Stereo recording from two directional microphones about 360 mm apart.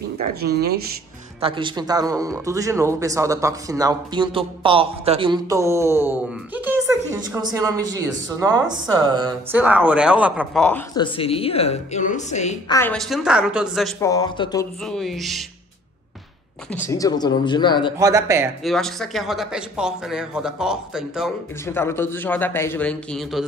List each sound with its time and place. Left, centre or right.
0.2 s speech: right
1.4 s speech: centre
11.1 s a woman's voice: centre
12.7 s speech: centre
16.7 s a woman's voice: centre
17.9 s speech: centre